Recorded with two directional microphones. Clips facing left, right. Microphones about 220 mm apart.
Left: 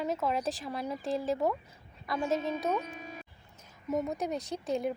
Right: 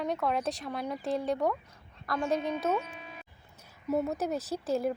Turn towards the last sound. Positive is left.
turn(degrees=0)  # may be behind; listen again after turning